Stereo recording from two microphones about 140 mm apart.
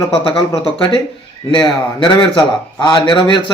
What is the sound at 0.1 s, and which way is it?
Speech, 35° left (ahead or behind).